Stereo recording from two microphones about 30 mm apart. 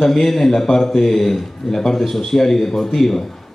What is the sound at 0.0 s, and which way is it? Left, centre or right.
A man's voice, centre.